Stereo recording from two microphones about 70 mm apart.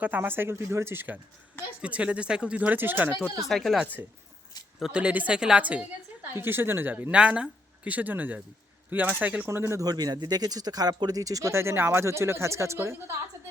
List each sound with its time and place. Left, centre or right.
0.0 s speech: right
1.8 s speech: centre
3.5 s speech: centre
4.8 s speech: centre
6.2 s speech: right
7.1 s speech: centre
9.5 s speech: right
9.8 s speech: right
11.5 s speech: right